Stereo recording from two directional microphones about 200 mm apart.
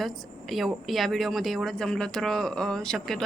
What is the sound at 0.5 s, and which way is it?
Speech, centre (ahead or behind).